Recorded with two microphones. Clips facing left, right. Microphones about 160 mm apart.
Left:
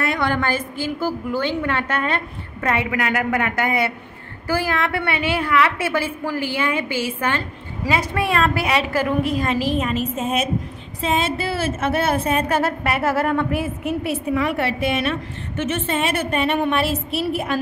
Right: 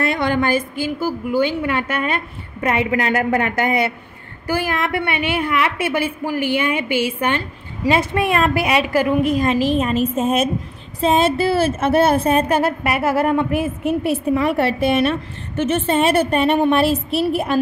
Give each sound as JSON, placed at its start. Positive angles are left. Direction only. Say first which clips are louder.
{"t": 0.0, "sound": "a woman's voice", "louder": "right 3 dB", "side_deg": -25}
{"t": 2.9, "sound": "a woman's voice", "louder": "right 3 dB", "side_deg": -30}
{"t": 12.4, "sound": "a woman's voice", "louder": "right 3 dB", "side_deg": -15}
{"t": 14.3, "sound": "a woman's voice", "louder": "right 3 dB", "side_deg": -35}